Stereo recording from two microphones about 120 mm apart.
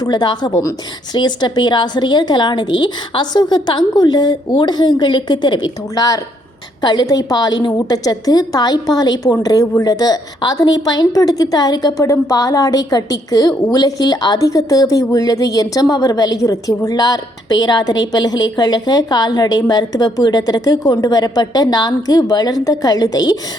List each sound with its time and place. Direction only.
0.0 s a woman's voice: 35° left (ahead or behind)